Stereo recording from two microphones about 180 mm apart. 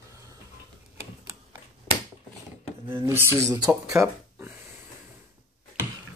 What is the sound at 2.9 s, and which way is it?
Speech, 15° right (ahead or behind).